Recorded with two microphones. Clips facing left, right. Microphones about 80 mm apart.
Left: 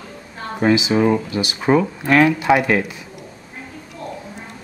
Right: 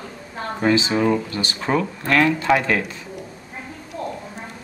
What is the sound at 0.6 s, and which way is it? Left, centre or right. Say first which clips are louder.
Speech: left 3 dB; centre.